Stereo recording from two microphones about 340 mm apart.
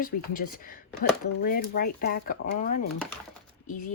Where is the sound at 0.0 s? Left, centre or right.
Left.